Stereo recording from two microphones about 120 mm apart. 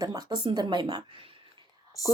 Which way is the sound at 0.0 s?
30° right (ahead or behind).